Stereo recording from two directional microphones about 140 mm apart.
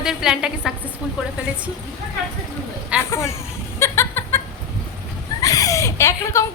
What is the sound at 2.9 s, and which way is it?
Vehicle, 10° right (ahead or behind).